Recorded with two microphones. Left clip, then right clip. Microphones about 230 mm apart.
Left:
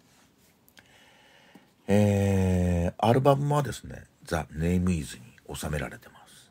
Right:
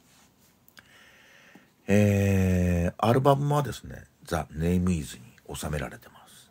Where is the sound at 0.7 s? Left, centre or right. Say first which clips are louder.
Right 3 dB; centre.